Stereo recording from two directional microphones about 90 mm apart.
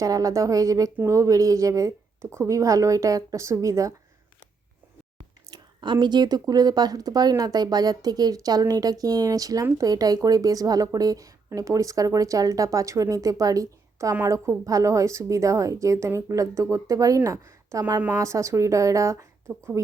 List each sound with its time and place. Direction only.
0.0 s speech: 40° right (ahead or behind)
5.5 s a sound: 60° right (ahead or behind)
6.5 s a woman's voice: 45° right (ahead or behind); by 19.8 s 30° right (ahead or behind)